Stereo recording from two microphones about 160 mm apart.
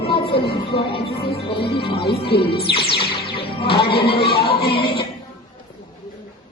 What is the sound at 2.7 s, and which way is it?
Speech, 35° left (ahead or behind).